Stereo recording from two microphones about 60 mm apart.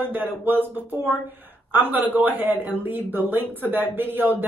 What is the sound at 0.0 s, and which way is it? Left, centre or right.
Speech, right.